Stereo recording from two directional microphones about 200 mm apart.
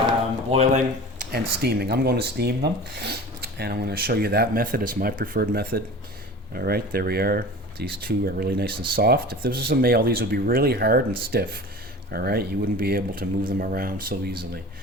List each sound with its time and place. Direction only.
0.5 s speech: 35° right (ahead or behind)